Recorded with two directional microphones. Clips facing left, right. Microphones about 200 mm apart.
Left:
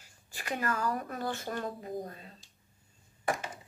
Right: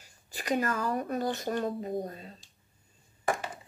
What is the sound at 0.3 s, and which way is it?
Speech, 20° right (ahead or behind).